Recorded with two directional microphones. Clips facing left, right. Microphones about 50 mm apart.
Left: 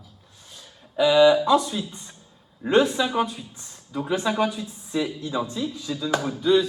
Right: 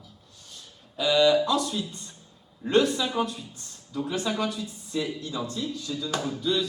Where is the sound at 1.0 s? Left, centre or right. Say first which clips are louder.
Left 5 dB; centre.